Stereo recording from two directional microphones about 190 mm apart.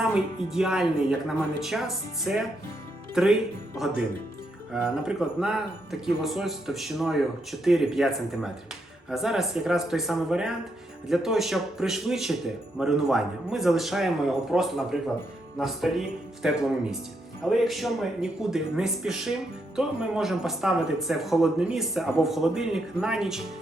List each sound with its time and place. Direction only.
0.0 s speech: centre (ahead or behind)